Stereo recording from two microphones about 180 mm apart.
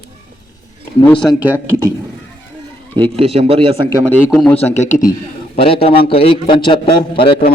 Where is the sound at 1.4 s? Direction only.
10° right (ahead or behind).